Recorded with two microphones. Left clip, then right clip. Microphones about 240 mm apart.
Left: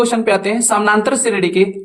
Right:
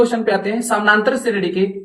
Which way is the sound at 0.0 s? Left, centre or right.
Left.